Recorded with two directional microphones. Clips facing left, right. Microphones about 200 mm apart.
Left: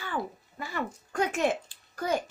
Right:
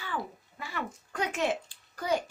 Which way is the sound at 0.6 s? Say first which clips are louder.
Left 3 dB; 45° left (ahead or behind).